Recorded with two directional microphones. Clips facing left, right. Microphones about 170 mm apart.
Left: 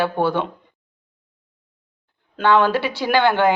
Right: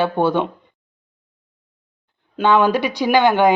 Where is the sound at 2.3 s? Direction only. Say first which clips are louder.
Right 1 dB; 15° right (ahead or behind).